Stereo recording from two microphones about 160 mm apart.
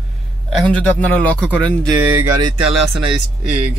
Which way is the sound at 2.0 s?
15° right (ahead or behind).